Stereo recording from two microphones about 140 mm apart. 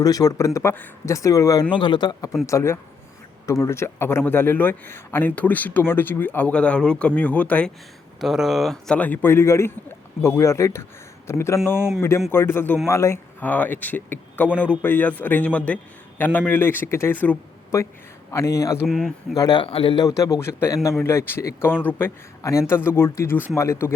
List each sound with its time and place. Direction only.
0.0 s speech: 25° left (ahead or behind)
1.7 s a man's voice: 35° left (ahead or behind); by 7.7 s 10° left (ahead or behind)
8.2 s a man's voice: centre (ahead or behind); by 18.8 s 20° left (ahead or behind)
18.9 s speech: centre (ahead or behind)
19.4 s speech: 30° left (ahead or behind)
19.6 s speech: 40° left (ahead or behind)
20.1 s a man's voice: 25° left (ahead or behind)